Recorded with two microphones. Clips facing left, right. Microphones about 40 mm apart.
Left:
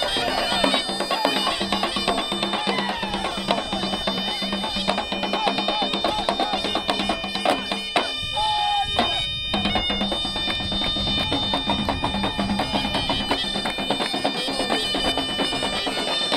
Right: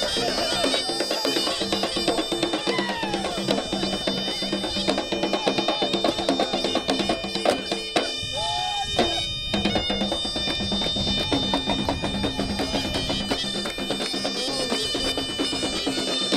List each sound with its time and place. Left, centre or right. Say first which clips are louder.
0.2 s bagpipes: left 2 dB; left
1.2 s music: left 3 dB; left
5.4 s music: left 1 dB; centre
11.5 s music: left 1 dB; centre
13.8 s bagpipes: left 5 dB; left